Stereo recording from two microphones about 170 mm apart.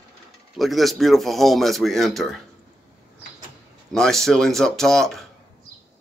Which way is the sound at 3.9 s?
Centre (ahead or behind).